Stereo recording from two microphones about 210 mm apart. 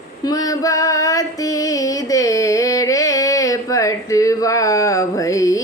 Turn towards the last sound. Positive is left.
turn(degrees=15)  # may be behind; listen again after turning